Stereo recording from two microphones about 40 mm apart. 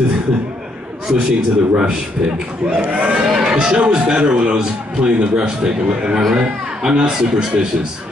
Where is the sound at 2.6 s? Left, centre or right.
Centre.